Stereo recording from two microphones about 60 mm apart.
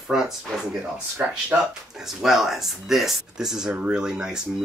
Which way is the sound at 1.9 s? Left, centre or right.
Centre.